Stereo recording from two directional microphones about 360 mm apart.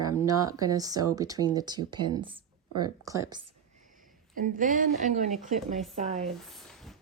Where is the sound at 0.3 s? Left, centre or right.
Centre.